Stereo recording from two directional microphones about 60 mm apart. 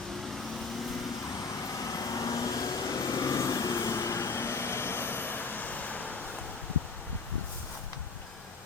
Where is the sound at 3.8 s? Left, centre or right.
Left.